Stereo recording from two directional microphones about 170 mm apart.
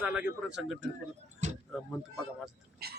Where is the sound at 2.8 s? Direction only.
70° right (ahead or behind).